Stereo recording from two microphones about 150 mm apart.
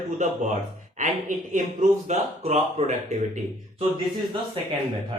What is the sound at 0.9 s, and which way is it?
Speech, 55° right (ahead or behind).